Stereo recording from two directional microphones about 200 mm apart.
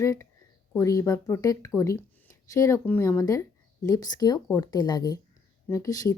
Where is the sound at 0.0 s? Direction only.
15° left (ahead or behind).